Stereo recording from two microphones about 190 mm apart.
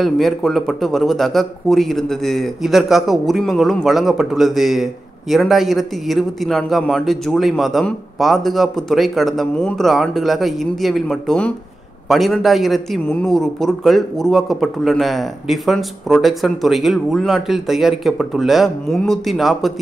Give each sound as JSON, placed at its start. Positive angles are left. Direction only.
{"t": 0.0, "sound": "a man's voice", "side_deg": 0}